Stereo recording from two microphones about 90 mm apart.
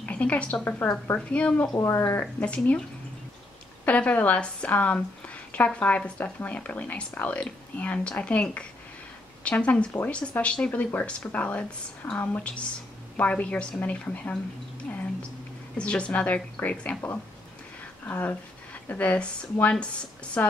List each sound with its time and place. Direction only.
0.0 s a woman's voice: 15° left (ahead or behind)
1.7 s speech: 35° left (ahead or behind)
2.4 s a woman's voice: 15° left (ahead or behind)
3.8 s a woman's voice: 15° left (ahead or behind)
15.8 s a woman's voice: 15° left (ahead or behind)
18.0 s a woman's voice: 25° left (ahead or behind)